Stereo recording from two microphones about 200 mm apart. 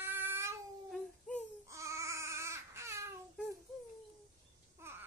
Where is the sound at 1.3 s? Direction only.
5° left (ahead or behind).